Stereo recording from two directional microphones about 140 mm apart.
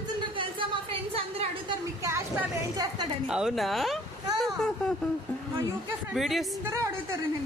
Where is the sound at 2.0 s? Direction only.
20° right (ahead or behind).